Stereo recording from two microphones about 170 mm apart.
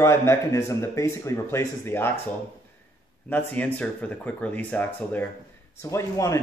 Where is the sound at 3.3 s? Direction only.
10° left (ahead or behind).